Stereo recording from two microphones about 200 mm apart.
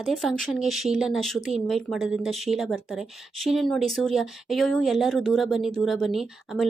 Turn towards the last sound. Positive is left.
turn(degrees=0)  # may be behind; listen again after turning